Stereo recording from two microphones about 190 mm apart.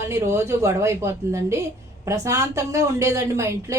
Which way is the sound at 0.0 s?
15° right (ahead or behind).